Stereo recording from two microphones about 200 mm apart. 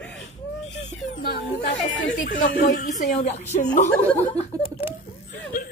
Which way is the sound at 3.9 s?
10° left (ahead or behind).